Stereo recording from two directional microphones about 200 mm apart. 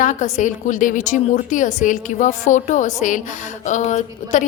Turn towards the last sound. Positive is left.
turn(degrees=35)  # may be behind; listen again after turning